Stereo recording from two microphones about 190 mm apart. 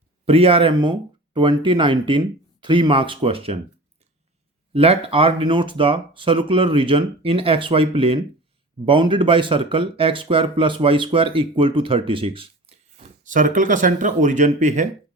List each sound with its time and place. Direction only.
0.3 s speech: 30° right (ahead or behind)
4.7 s speech: 30° right (ahead or behind)